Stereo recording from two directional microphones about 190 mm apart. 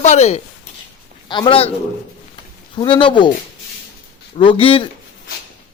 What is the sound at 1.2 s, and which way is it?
Speech, 25° left (ahead or behind).